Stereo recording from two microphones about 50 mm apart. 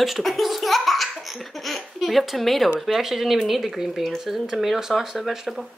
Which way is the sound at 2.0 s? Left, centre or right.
Centre.